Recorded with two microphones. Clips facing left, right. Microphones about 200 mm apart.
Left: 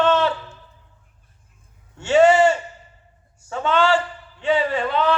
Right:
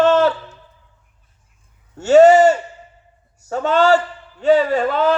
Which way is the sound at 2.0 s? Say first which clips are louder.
Right 5 dB; 40° right (ahead or behind).